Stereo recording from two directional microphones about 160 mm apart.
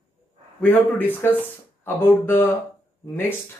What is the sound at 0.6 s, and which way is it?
Speech, 10° left (ahead or behind).